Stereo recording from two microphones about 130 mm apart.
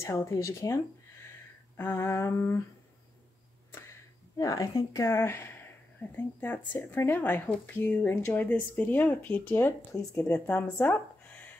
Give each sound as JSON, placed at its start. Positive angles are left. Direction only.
{"t": 0.0, "sound": "humming", "side_deg": 20}
{"t": 1.8, "sound": "humming", "side_deg": 20}
{"t": 4.4, "sound": "speech", "side_deg": 25}